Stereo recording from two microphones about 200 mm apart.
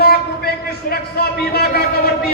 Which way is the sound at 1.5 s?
50° left (ahead or behind).